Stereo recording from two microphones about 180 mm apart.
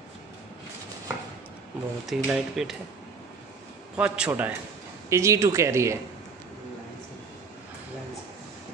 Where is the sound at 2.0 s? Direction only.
Centre (ahead or behind).